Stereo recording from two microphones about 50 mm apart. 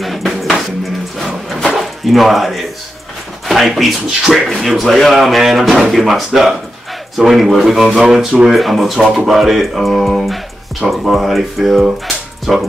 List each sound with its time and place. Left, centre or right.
0.0 s music: centre
1.1 s a sound: centre
3.4 s speech: centre
8.5 s speech: centre